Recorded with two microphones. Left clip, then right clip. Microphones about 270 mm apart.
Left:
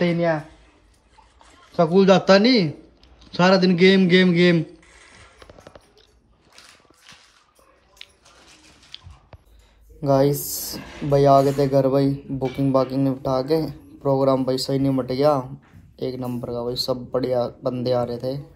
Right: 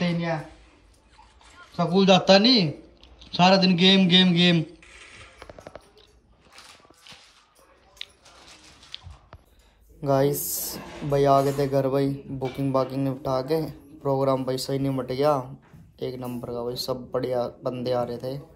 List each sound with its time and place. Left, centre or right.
1.5 s a man's voice: centre
8.0 s squish: centre
10.0 s speech: centre
10.8 s a sound: right
11.1 s speech: centre